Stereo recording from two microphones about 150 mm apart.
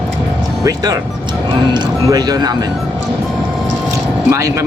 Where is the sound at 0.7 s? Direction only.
25° right (ahead or behind).